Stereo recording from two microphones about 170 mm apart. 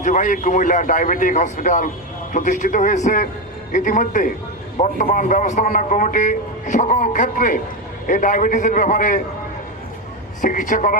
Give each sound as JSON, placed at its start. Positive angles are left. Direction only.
{"t": 0.0, "sound": "a man's voice", "side_deg": 50}
{"t": 10.4, "sound": "a man's voice", "side_deg": 50}